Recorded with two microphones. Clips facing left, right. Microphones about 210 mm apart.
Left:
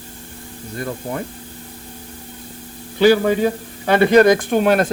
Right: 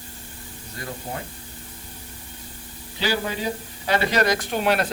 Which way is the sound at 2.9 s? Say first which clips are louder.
Left 13 dB; 55° left (ahead or behind).